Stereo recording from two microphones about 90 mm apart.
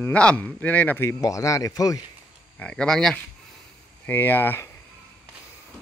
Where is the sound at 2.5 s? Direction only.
10° left (ahead or behind).